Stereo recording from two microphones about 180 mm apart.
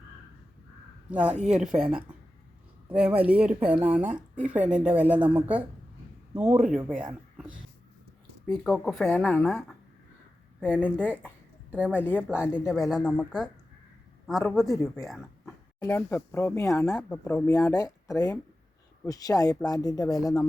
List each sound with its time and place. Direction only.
1.1 s a man's voice: 5° right (ahead or behind)
7.1 s a sound: 5° right (ahead or behind)
8.6 s speech: centre (ahead or behind)
10.8 s speech: 10° left (ahead or behind)
11.7 s a woman's voice: 10° right (ahead or behind)
15.0 s a sound: centre (ahead or behind)
15.8 s speech: 15° left (ahead or behind)